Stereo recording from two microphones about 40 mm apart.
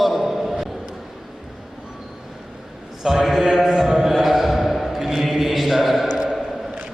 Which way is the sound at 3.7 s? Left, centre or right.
Centre.